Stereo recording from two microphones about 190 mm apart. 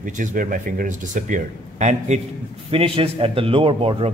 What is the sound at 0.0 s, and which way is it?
A man's voice, 45° right (ahead or behind).